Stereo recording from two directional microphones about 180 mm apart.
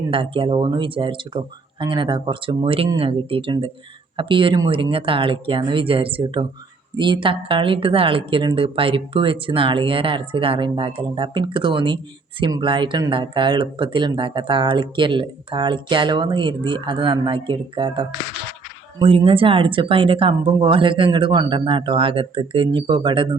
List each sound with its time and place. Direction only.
0.1 s speech: 30° right (ahead or behind)